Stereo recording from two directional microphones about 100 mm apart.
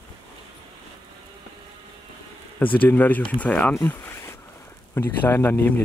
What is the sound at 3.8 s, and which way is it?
Zipper, 25° left (ahead or behind).